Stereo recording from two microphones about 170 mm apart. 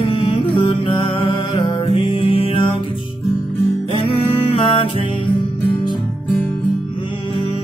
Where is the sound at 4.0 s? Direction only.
35° left (ahead or behind).